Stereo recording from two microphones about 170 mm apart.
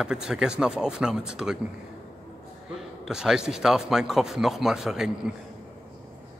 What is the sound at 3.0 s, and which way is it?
Speech, 5° right (ahead or behind).